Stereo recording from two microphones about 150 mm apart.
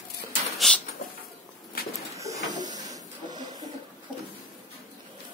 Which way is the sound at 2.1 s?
20° right (ahead or behind).